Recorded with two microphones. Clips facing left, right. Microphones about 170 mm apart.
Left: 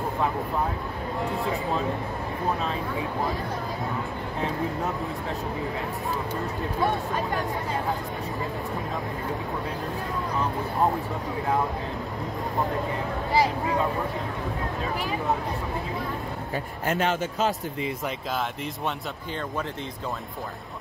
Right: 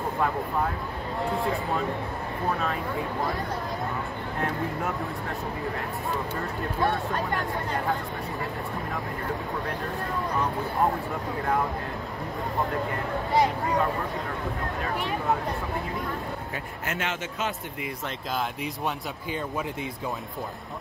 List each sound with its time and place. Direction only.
13.3 s speech: 5° left (ahead or behind)
16.8 s speech: 35° left (ahead or behind)